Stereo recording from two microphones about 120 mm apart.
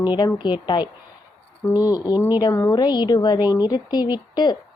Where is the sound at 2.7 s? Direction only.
35° left (ahead or behind).